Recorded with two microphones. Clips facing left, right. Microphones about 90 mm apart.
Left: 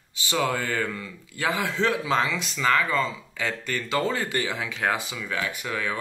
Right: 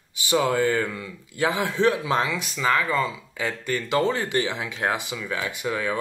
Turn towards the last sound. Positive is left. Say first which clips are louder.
# right 2 dB
turn(degrees=-20)  # may be behind; listen again after turning